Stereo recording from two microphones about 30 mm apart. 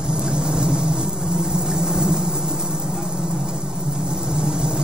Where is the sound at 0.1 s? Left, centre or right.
Right.